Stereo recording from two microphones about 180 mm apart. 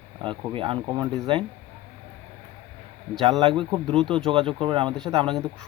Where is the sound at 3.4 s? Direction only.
30° right (ahead or behind).